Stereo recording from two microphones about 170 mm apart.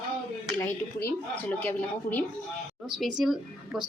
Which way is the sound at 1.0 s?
10° left (ahead or behind).